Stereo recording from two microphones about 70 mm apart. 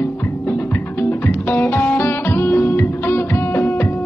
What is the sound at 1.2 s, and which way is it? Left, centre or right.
Music, left.